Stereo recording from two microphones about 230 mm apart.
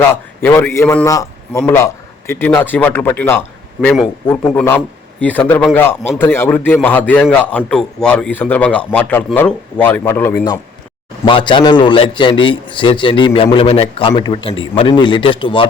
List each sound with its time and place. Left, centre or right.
0.1 s a man's voice: centre